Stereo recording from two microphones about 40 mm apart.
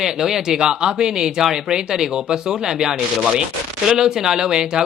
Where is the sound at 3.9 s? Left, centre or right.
Centre.